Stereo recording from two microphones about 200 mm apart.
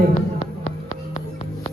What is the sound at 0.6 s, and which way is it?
Music, 40° left (ahead or behind).